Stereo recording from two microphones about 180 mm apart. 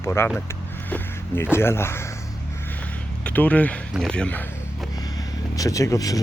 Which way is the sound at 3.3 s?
10° left (ahead or behind).